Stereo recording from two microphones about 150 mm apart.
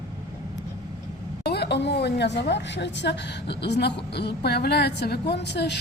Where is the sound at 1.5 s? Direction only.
90° left.